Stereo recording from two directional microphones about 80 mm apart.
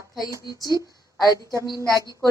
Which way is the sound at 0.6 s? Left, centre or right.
Left.